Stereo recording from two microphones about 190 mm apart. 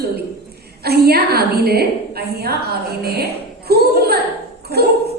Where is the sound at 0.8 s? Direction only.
55° right (ahead or behind).